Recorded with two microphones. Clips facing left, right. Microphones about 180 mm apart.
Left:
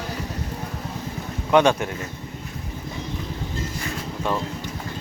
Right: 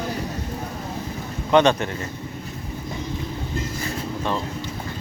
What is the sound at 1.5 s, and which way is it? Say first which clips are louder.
Speech: right 1 dB; 5° left (ahead or behind).